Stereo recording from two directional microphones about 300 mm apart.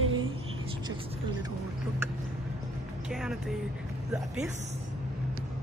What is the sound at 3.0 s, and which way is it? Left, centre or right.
Speech, centre.